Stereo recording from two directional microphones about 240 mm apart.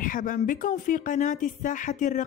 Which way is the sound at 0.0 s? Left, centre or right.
Left.